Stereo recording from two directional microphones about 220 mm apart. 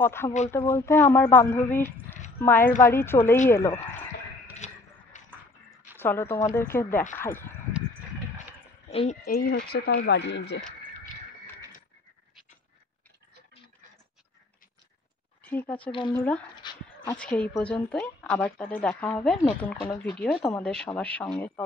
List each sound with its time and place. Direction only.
0.0 s a woman's voice: 10° left (ahead or behind)
4.6 s a sound: 35° left (ahead or behind)
5.1 s music: 35° left (ahead or behind)
5.9 s a woman's voice: 10° left (ahead or behind)
8.9 s speech: 30° left (ahead or behind)
9.2 s speech: 45° left (ahead or behind)
15.4 s speech: 5° left (ahead or behind)
15.9 s speech: 20° left (ahead or behind)
16.6 s dog: 20° left (ahead or behind)
17.0 s a woman's voice: 5° left (ahead or behind)